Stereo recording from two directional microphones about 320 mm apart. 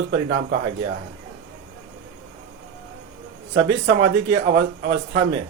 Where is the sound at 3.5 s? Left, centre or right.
Right.